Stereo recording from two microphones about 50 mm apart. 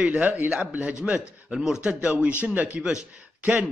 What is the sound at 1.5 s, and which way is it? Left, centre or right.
Speech, centre.